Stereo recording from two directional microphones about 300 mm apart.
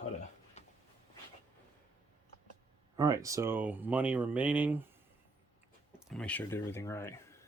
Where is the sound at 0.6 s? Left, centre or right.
Left.